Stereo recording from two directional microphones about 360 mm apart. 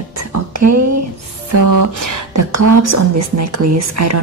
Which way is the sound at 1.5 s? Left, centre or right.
Right.